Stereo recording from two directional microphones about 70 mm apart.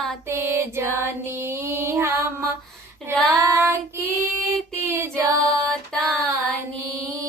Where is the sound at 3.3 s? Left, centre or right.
Right.